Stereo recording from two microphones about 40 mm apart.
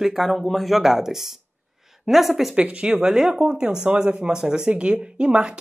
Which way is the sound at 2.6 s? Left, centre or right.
Right.